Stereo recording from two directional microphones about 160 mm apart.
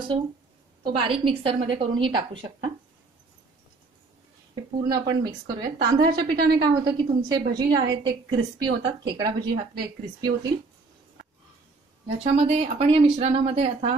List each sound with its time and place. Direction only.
0.8 s a woman's voice: 30° right (ahead or behind)
4.8 s a woman's voice: 25° right (ahead or behind)
12.2 s a woman's voice: 45° right (ahead or behind)